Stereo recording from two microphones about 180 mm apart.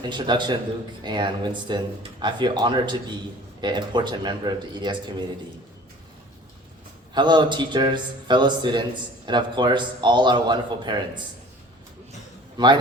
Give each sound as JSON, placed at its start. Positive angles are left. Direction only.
{"t": 0.0, "sound": "a man's voice", "side_deg": -25}
{"t": 7.1, "sound": "a man's voice", "side_deg": -25}
{"t": 12.6, "sound": "a man's voice", "side_deg": -25}